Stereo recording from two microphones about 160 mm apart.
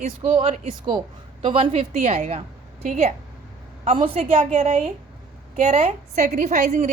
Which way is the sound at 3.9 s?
35° right (ahead or behind).